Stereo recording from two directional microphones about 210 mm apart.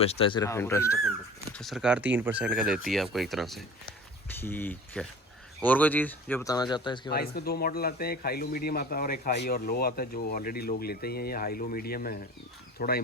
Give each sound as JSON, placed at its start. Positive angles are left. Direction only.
{"t": 0.0, "sound": "speech", "side_deg": 30}
{"t": 1.5, "sound": "speech", "side_deg": 0}
{"t": 7.1, "sound": "a man's voice", "side_deg": 50}